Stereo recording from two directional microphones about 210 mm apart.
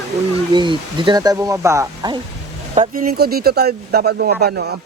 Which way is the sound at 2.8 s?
45° right (ahead or behind).